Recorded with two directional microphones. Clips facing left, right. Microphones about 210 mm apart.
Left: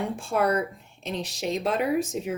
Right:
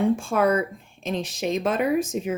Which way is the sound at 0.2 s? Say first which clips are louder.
Right 2 dB; 90° right.